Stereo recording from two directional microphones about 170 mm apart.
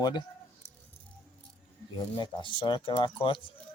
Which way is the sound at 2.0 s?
25° left (ahead or behind).